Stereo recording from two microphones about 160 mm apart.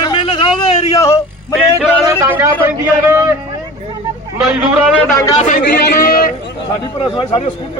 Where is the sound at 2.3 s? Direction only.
15° right (ahead or behind).